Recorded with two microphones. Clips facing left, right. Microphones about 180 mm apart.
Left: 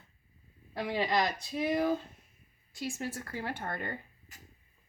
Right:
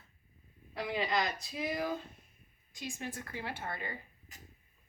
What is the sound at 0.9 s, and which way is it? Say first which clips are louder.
Speech: left 3 dB; 30° left (ahead or behind).